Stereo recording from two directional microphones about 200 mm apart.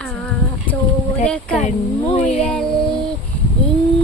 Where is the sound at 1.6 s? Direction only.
35° left (ahead or behind).